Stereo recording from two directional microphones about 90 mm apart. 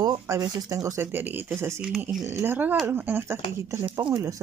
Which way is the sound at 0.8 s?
25° right (ahead or behind).